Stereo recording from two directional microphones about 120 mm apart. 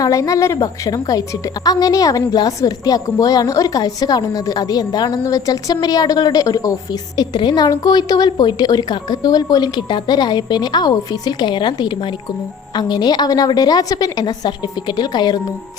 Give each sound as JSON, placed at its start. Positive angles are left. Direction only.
{"t": 0.0, "sound": "a woman's voice", "side_deg": 30}